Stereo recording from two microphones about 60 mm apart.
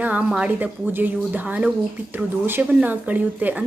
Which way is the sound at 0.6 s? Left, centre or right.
Right.